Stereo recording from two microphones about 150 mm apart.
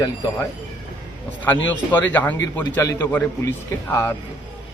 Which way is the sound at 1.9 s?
10° left (ahead or behind).